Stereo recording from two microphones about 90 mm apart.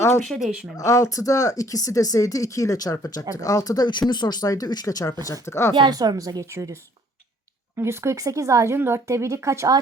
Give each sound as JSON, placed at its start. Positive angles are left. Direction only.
{"t": 0.2, "sound": "speech", "side_deg": 0}
{"t": 0.8, "sound": "speech", "side_deg": 35}
{"t": 5.3, "sound": "speech", "side_deg": 30}
{"t": 5.9, "sound": "speech", "side_deg": -45}
{"t": 7.8, "sound": "speech", "side_deg": -30}